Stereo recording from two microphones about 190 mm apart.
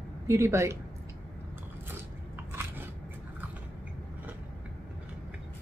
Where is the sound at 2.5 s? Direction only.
10° right (ahead or behind).